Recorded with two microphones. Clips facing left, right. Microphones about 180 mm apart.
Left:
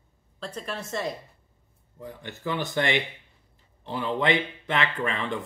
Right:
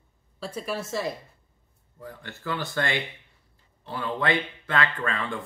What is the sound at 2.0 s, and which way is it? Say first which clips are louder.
Speech: left 3 dB; 20° left (ahead or behind).